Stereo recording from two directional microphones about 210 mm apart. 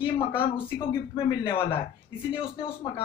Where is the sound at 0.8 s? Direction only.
25° left (ahead or behind).